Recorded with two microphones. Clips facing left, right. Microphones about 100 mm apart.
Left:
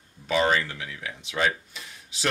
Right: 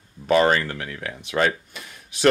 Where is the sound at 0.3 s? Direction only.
55° right (ahead or behind).